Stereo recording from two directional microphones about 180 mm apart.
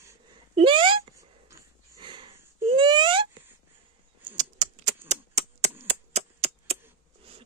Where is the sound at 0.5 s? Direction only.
30° right (ahead or behind).